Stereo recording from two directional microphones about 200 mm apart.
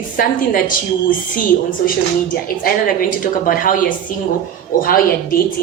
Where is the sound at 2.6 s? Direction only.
45° left (ahead or behind).